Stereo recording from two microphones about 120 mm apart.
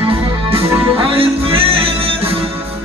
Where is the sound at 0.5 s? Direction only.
50° right (ahead or behind).